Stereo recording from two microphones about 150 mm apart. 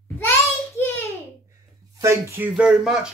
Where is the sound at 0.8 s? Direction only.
15° left (ahead or behind).